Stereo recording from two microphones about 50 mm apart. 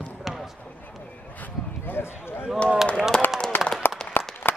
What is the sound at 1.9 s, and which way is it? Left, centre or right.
Speech, left.